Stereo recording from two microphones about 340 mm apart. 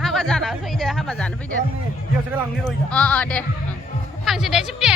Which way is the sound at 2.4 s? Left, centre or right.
Centre.